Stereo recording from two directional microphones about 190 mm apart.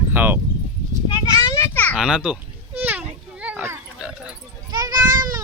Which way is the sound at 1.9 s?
5° right (ahead or behind).